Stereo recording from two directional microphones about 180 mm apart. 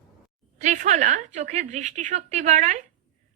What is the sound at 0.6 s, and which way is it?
A woman's voice, 40° right (ahead or behind).